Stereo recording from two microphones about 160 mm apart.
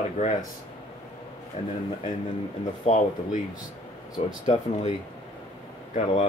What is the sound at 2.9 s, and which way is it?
Speech, 45° left (ahead or behind).